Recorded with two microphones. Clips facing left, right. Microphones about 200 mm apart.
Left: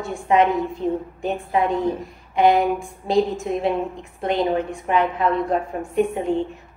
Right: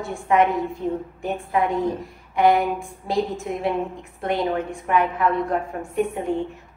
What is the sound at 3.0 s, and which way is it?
Speech, 25° left (ahead or behind).